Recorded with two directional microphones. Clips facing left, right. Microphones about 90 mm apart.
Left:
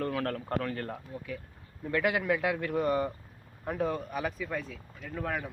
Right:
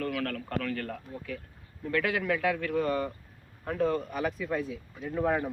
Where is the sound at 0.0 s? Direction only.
30° left (ahead or behind); by 4.8 s 5° right (ahead or behind).